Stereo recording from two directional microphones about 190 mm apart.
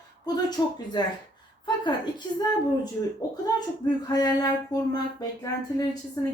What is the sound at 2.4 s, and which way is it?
Speech, 20° left (ahead or behind).